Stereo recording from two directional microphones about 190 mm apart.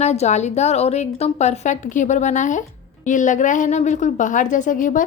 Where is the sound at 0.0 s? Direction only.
35° left (ahead or behind).